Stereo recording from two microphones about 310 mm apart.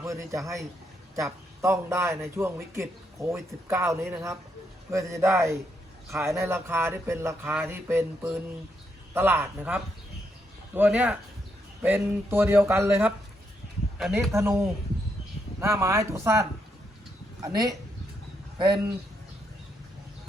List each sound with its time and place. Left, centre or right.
0.0 s a man's voice: centre